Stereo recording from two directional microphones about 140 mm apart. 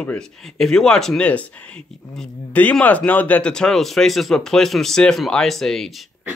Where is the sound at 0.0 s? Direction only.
5° left (ahead or behind).